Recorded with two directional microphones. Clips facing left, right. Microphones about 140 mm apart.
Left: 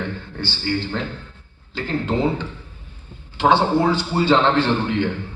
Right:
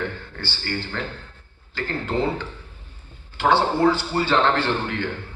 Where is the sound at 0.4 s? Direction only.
20° left (ahead or behind).